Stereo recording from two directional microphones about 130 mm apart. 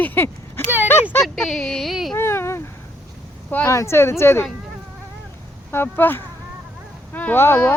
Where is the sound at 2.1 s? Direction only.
20° left (ahead or behind).